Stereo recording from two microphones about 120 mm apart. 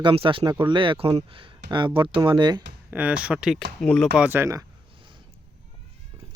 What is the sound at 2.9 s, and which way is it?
Speech, 10° right (ahead or behind).